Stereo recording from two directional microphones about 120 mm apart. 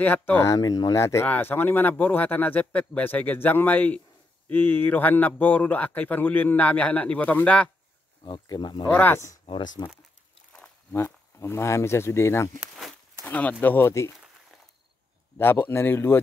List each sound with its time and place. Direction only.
0.0 s speech: 15° left (ahead or behind)
8.2 s speech: 40° left (ahead or behind)
8.9 s speech: 15° left (ahead or behind)
9.8 s speech: 35° left (ahead or behind)
10.9 s speech: 20° left (ahead or behind)
12.5 s a sound: centre (ahead or behind)
13.2 s speech: 15° left (ahead or behind)
15.3 s speech: 20° left (ahead or behind)